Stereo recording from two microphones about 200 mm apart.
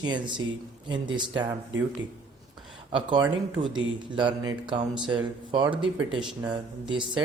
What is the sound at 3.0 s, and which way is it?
Speech, 25° right (ahead or behind).